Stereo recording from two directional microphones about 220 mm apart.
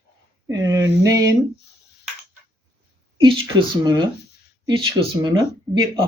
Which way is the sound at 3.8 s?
20° right (ahead or behind).